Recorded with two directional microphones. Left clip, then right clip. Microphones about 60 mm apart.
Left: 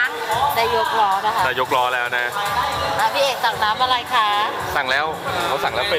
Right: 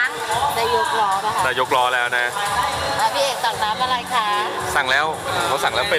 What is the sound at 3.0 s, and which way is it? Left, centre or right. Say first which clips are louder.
Speech: left 1 dB; left.